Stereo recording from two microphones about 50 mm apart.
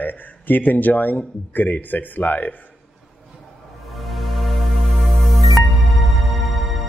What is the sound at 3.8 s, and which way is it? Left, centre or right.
Music, centre.